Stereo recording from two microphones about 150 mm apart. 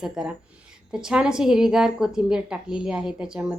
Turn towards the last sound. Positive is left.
turn(degrees=-5)  # may be behind; listen again after turning